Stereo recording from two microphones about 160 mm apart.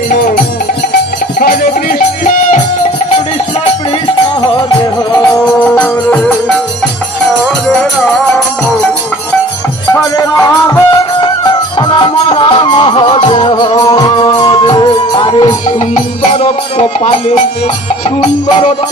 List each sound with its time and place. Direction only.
5.4 s music: 10° left (ahead or behind)
10.1 s music: 20° left (ahead or behind)
16.2 s music: 45° left (ahead or behind)